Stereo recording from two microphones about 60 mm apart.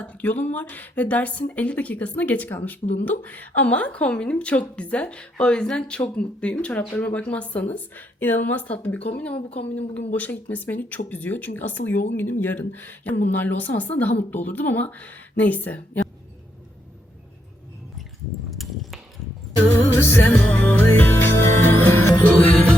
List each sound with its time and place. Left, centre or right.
0.1 s speech: left
18.5 s a sound: centre
19.9 s music: left
20.4 s speech: left
20.8 s music: left